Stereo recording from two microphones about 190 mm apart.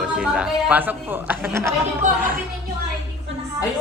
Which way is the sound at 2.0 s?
40° right (ahead or behind).